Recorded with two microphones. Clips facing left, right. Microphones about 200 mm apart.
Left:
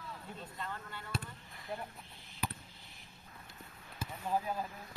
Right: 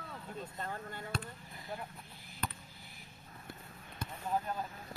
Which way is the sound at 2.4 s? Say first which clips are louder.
Left 1 dB; 10° left (ahead or behind).